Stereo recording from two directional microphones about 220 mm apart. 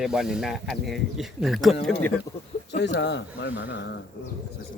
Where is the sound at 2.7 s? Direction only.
50° left (ahead or behind).